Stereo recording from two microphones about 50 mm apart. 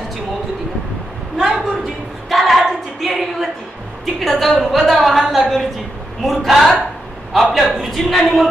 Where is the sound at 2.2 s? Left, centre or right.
Centre.